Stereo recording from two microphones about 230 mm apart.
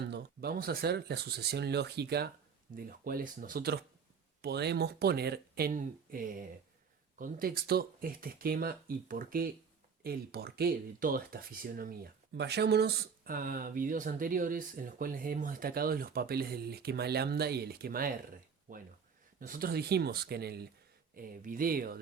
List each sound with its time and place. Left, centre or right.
0.0 s speech: right